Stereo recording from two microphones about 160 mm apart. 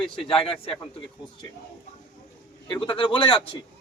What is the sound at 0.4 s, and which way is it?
Speech, 35° left (ahead or behind).